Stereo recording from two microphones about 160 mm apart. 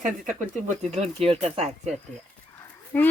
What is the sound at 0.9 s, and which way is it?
Speech, 40° right (ahead or behind).